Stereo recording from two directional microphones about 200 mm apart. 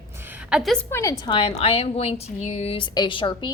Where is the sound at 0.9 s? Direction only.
15° left (ahead or behind).